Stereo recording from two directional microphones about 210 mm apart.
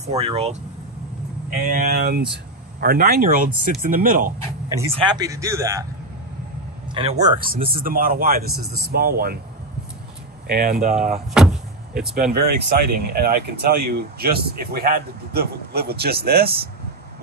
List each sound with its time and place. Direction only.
0.0 s speech: 30° right (ahead or behind)
1.7 s speech: 45° right (ahead or behind)
4.9 s speech: 20° right (ahead or behind)
6.9 s speech: 25° right (ahead or behind)
7.2 s speech: 40° right (ahead or behind)
10.4 s speech: 45° right (ahead or behind)
11.3 s vehicle: 5° right (ahead or behind)
12.3 s speech: 50° right (ahead or behind)